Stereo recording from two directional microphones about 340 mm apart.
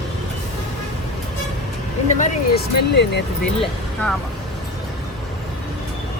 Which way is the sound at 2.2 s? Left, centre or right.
Left.